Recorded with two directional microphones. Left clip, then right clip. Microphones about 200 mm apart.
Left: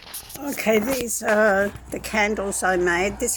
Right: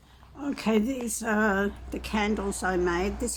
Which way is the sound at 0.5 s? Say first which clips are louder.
Left 7 dB; 10° left (ahead or behind).